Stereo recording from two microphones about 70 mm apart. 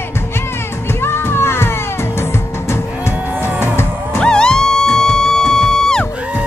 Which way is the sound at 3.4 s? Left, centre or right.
Right.